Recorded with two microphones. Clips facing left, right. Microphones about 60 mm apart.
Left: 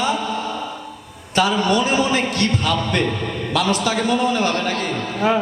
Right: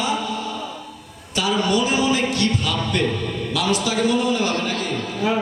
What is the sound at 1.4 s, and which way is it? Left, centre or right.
A man's voice, left.